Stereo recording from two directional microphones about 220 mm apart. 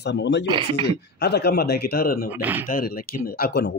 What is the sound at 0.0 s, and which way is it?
Speech, 50° left (ahead or behind).